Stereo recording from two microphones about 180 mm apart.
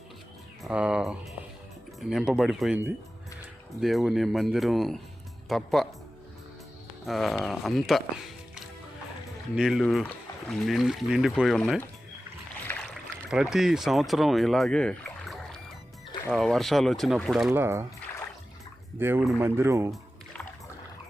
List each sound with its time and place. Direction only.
0.6 s speech: 5° right (ahead or behind)
7.0 s speech: centre (ahead or behind)
9.6 s speech: centre (ahead or behind)
12.7 s boat: 10° left (ahead or behind)
13.3 s speech: 5° right (ahead or behind)
17.5 s speech: 15° right (ahead or behind)
18.9 s speech: 10° right (ahead or behind)
19.9 s music: 5° left (ahead or behind)